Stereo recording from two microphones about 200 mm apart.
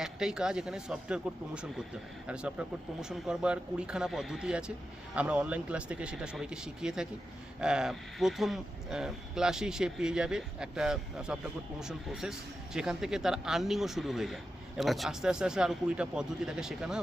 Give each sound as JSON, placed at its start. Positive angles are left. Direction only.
{"t": 0.0, "sound": "speech", "side_deg": -5}